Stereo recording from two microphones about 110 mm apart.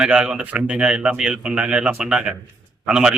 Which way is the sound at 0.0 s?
10° right (ahead or behind).